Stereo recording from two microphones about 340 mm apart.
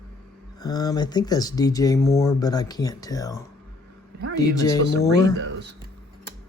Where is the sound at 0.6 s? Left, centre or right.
Centre.